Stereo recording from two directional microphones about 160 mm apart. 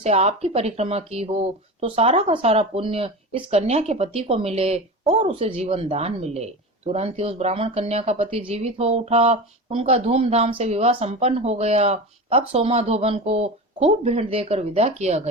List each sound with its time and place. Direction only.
0.0 s speech: 40° right (ahead or behind)